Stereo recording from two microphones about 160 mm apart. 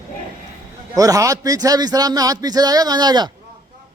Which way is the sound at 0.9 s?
20° right (ahead or behind).